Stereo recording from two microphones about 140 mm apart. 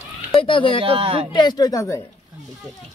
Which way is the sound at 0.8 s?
40° right (ahead or behind).